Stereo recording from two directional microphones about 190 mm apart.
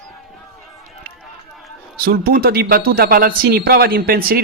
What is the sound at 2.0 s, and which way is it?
A man's voice, 50° right (ahead or behind).